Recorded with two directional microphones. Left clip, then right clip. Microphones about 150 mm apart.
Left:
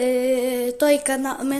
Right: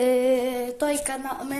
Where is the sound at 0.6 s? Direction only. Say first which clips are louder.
Left 7 dB; 65° left (ahead or behind).